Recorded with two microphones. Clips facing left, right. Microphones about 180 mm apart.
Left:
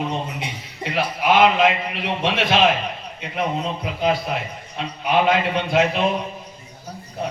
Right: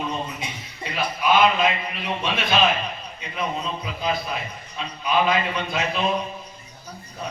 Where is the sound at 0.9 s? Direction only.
70° left (ahead or behind).